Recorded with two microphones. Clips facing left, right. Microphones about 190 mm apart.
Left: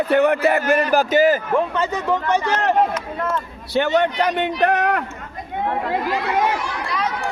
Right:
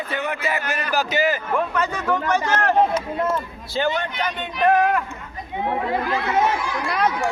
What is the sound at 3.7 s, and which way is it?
Speech, 70° left (ahead or behind).